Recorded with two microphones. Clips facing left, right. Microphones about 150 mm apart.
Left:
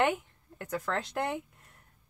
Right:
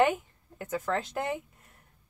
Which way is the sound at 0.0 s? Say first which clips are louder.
Right 3 dB; centre (ahead or behind).